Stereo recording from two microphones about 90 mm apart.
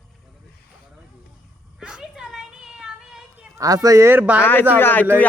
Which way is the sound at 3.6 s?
40° right (ahead or behind).